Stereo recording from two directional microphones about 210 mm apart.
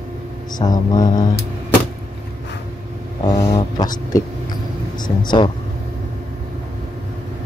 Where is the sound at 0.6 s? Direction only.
20° left (ahead or behind).